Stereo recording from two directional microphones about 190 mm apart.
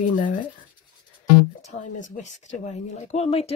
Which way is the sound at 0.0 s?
45° left (ahead or behind).